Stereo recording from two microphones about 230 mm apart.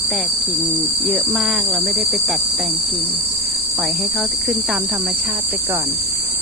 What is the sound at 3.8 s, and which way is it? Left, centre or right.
Cricket, centre.